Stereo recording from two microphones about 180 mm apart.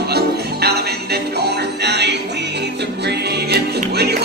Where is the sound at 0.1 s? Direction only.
65° right (ahead or behind).